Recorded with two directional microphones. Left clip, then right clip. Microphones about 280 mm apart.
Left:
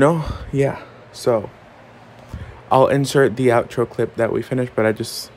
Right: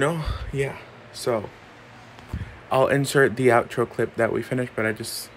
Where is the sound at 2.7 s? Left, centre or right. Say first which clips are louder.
Left 5 dB; centre.